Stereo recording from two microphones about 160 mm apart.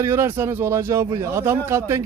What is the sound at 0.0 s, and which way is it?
A man's voice, 15° right (ahead or behind).